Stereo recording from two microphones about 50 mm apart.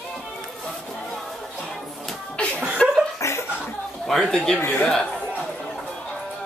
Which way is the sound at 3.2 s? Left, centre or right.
Left.